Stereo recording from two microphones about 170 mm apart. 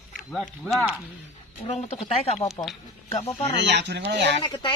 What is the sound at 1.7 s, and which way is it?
Speech, 35° left (ahead or behind).